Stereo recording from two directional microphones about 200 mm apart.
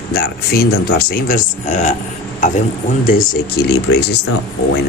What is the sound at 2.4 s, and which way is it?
Stir, 40° left (ahead or behind).